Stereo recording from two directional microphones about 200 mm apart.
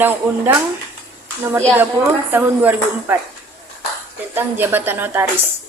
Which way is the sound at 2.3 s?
10° right (ahead or behind).